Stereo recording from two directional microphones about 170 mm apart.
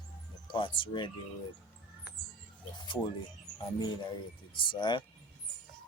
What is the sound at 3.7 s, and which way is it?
Speech, 25° left (ahead or behind).